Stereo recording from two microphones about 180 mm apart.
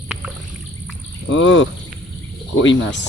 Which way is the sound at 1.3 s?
90° left.